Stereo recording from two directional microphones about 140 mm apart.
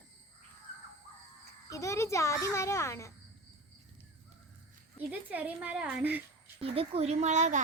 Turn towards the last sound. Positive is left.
turn(degrees=-60)  # may be behind; listen again after turning